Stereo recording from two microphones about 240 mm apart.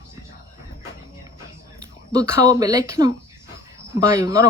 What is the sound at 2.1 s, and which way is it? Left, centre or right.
Speech, centre.